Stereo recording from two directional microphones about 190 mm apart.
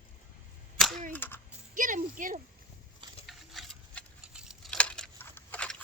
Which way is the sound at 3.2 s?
Centre (ahead or behind).